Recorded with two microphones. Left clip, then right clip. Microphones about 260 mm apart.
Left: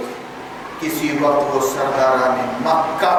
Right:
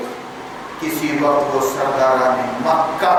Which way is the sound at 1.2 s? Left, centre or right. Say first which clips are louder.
Even; centre.